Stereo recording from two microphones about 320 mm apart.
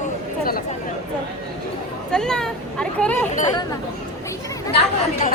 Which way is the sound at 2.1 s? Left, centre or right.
Centre.